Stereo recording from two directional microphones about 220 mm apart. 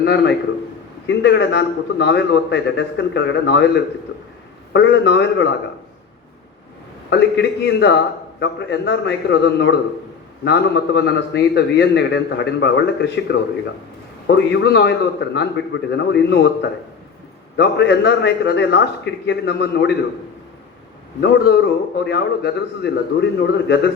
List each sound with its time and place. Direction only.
0.0 s a man's voice: 50° left (ahead or behind)
4.7 s a man's voice: 50° left (ahead or behind)
7.1 s a man's voice: 50° left (ahead or behind)
21.2 s a man's voice: 50° left (ahead or behind)